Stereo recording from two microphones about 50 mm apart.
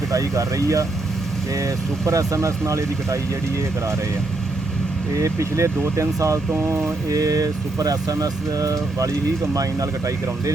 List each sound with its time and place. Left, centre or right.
0.1 s speech: right
5.1 s speech: right
6.7 s mantra: right